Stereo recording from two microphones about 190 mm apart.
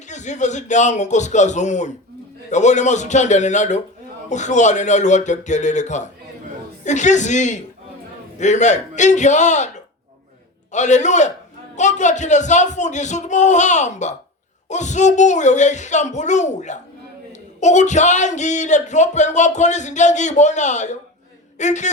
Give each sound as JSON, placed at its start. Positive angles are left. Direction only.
{"t": 0.1, "sound": "speech", "side_deg": 40}